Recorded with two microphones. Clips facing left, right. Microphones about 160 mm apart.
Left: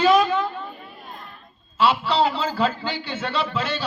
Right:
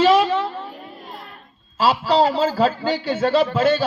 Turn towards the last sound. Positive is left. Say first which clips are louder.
# right 9 dB
turn(degrees=-50)  # may be behind; listen again after turning